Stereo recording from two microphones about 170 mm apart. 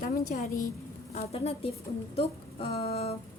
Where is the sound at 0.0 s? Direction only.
50° left (ahead or behind).